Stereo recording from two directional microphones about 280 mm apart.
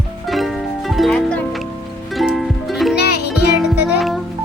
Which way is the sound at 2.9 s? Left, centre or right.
Left.